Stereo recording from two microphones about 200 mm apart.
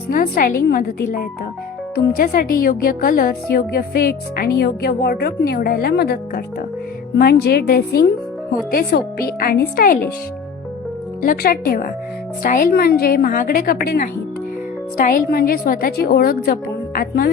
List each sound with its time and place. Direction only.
0.1 s a woman's voice: 45° left (ahead or behind)
11.2 s a woman's voice: 45° left (ahead or behind)